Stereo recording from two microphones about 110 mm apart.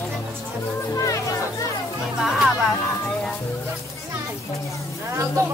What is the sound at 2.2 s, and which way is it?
Speech, centre (ahead or behind).